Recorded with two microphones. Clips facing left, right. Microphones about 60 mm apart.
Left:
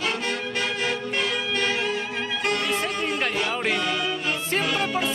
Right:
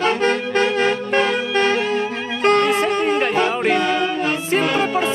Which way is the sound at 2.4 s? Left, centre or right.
Right.